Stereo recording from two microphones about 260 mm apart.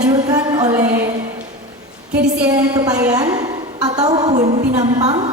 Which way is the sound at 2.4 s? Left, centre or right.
Centre.